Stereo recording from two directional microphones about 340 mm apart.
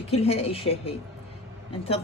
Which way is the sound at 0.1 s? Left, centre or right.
Centre.